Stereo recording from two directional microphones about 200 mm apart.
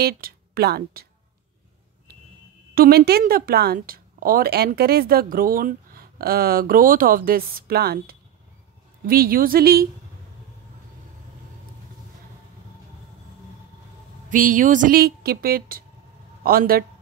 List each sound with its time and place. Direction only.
0.0 s speech: 50° right (ahead or behind)
2.7 s a woman's voice: 45° right (ahead or behind)
14.3 s a woman's voice: 40° right (ahead or behind)